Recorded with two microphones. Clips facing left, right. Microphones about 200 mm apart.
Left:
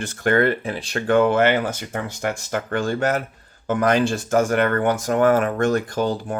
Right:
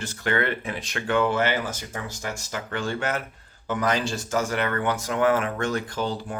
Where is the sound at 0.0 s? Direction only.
50° left (ahead or behind); by 1.0 s 30° left (ahead or behind).